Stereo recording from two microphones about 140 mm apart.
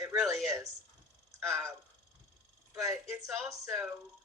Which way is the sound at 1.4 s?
20° right (ahead or behind).